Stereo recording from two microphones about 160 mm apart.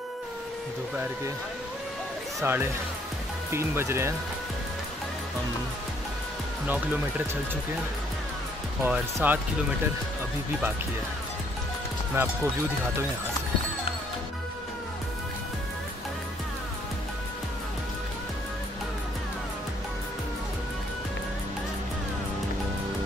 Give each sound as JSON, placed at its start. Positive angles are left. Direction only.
{"t": 2.4, "sound": "speech", "side_deg": -15}
{"t": 8.8, "sound": "speech", "side_deg": -10}
{"t": 12.2, "sound": "speech", "side_deg": -15}